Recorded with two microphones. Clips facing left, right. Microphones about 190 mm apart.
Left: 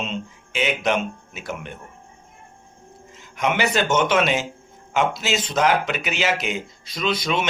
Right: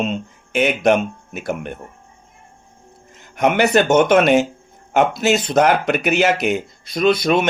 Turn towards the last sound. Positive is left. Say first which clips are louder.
# right 8 dB
turn(degrees=-55)  # may be behind; listen again after turning